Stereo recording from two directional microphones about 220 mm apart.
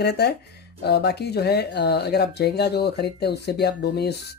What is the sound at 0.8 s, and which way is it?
Speech, 45° left (ahead or behind).